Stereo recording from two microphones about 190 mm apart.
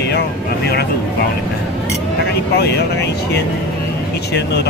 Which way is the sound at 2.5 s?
60° left (ahead or behind).